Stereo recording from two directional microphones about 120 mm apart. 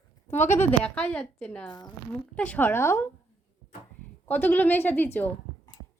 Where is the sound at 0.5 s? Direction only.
10° left (ahead or behind).